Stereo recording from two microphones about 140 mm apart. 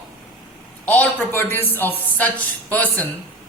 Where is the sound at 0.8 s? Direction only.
10° left (ahead or behind).